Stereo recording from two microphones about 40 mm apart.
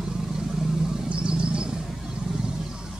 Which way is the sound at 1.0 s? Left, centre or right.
Right.